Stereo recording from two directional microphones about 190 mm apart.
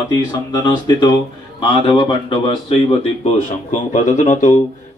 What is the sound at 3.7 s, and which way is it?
Speech, 40° left (ahead or behind).